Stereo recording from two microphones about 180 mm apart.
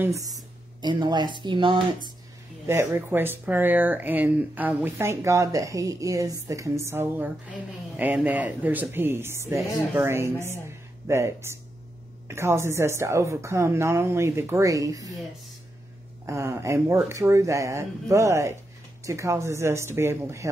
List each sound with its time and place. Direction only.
0.0 s speech: 20° right (ahead or behind)
2.6 s speech: 15° right (ahead or behind)
16.3 s speech: 15° right (ahead or behind)